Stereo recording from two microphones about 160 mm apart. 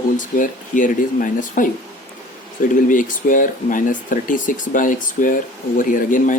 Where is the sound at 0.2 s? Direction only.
55° left (ahead or behind).